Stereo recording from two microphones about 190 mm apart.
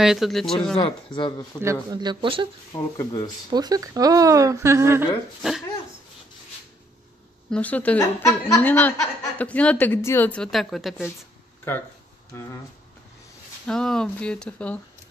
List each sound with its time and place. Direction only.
0.0 s speech: centre (ahead or behind)
0.7 s speech: 25° left (ahead or behind)
1.6 s speech: 15° right (ahead or behind)
2.7 s speech: 20° left (ahead or behind)
3.4 s speech: 20° right (ahead or behind)
7.5 s speech: 10° left (ahead or behind)
11.7 s speech: 10° left (ahead or behind)
13.7 s speech: 5° left (ahead or behind)